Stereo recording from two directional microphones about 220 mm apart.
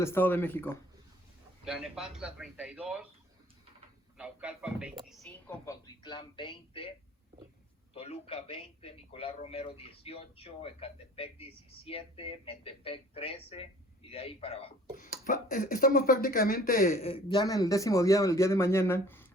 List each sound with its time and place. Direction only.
0.0 s speech: 10° left (ahead or behind)
1.6 s speech: 5° right (ahead or behind)
4.2 s speech: 5° right (ahead or behind)
5.8 s a man's voice: 20° left (ahead or behind)
7.9 s a man's voice: 25° left (ahead or behind)
14.9 s a man's voice: 40° left (ahead or behind); by 19.3 s 10° left (ahead or behind)